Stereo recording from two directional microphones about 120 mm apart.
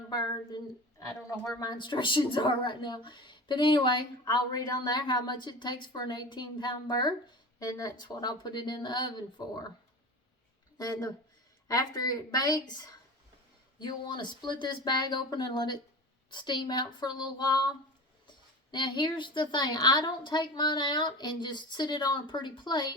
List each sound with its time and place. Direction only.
0.1 s a woman's voice: 35° left (ahead or behind)
10.8 s a woman's voice: 35° left (ahead or behind)
18.7 s a woman's voice: 40° left (ahead or behind)